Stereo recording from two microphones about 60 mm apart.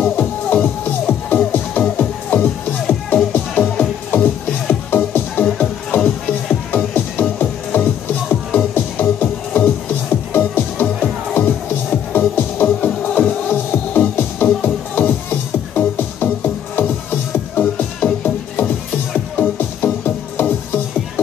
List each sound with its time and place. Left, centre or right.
0.0 s music: left
6.9 s music: left